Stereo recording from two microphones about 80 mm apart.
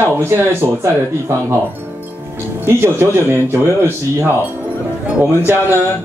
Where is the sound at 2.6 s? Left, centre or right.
Right.